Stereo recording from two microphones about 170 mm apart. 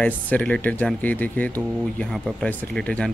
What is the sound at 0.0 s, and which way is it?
Speech, 10° left (ahead or behind).